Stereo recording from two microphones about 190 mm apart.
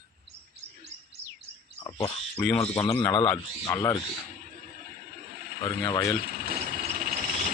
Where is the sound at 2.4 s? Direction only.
10° left (ahead or behind).